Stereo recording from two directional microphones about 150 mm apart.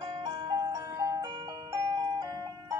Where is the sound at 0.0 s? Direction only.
30° right (ahead or behind).